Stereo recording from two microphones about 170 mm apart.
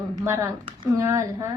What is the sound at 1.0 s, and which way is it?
Speech, 15° right (ahead or behind).